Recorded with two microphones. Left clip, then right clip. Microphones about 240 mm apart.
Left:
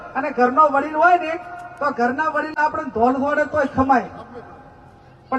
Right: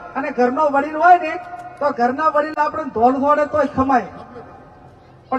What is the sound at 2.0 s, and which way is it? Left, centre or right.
Speech, centre.